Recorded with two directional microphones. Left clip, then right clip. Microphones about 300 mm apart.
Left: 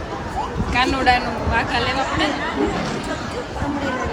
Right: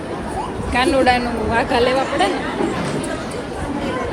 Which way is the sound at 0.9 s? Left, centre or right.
Centre.